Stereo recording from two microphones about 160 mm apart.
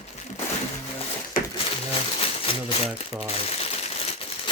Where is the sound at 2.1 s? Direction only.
35° left (ahead or behind).